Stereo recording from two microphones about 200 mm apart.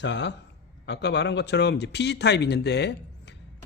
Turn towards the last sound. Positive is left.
turn(degrees=55)  # may be behind; listen again after turning